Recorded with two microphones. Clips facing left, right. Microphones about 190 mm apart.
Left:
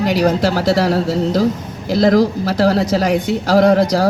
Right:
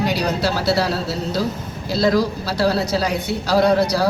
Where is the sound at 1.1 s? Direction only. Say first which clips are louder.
Left 7 dB; 90° left.